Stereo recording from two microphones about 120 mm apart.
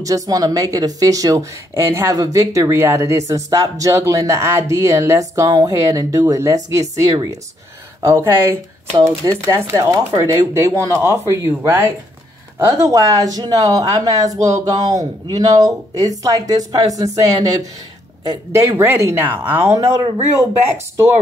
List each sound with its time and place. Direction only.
0.0 s speech: 30° right (ahead or behind)